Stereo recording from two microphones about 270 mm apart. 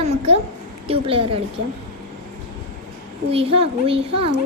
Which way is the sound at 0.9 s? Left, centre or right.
Centre.